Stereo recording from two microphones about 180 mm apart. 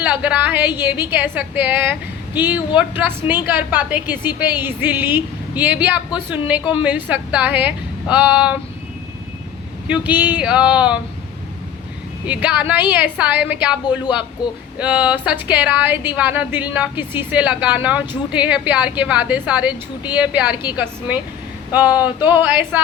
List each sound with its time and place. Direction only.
0.0 s a woman's voice: 10° right (ahead or behind)
10.1 s speech: 10° right (ahead or behind)
12.2 s speech: 5° right (ahead or behind)
14.4 s a sound: 25° left (ahead or behind)
14.8 s speech: 10° right (ahead or behind)